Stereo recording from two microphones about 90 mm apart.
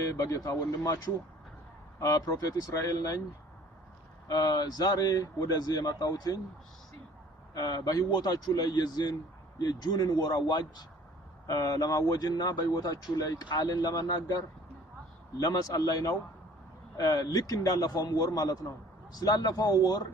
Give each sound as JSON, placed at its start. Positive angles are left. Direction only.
{"t": 0.1, "sound": "speech", "side_deg": 35}
{"t": 2.0, "sound": "speech", "side_deg": 45}
{"t": 4.3, "sound": "speech", "side_deg": 50}
{"t": 7.5, "sound": "speech", "side_deg": 50}
{"t": 11.4, "sound": "speech", "side_deg": 40}
{"t": 17.2, "sound": "speech", "side_deg": 40}